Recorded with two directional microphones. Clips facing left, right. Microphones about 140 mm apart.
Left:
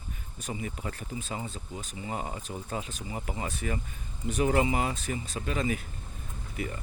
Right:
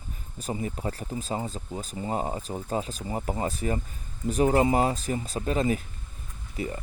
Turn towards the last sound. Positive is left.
turn(degrees=-35)  # may be behind; listen again after turning